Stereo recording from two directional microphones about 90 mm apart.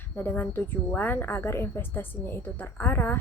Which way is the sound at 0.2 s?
20° left (ahead or behind).